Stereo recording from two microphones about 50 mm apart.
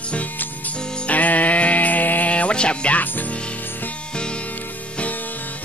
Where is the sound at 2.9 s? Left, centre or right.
Left.